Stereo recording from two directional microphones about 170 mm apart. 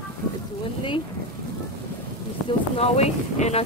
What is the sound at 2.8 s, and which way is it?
Speech, 40° left (ahead or behind).